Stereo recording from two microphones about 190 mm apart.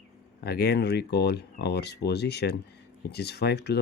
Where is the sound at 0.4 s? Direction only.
55° left (ahead or behind).